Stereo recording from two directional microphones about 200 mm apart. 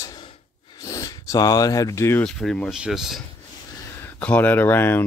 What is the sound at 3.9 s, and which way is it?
Speech, 10° left (ahead or behind).